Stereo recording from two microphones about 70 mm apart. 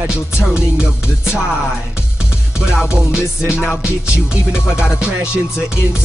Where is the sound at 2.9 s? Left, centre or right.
Centre.